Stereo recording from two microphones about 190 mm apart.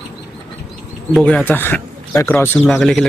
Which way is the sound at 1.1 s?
5° left (ahead or behind).